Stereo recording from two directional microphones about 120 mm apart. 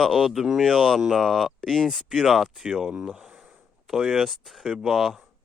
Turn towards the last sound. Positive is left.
turn(degrees=0)  # may be behind; listen again after turning